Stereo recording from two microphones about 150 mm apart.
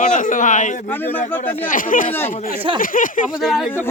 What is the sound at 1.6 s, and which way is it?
Speech, 65° left (ahead or behind).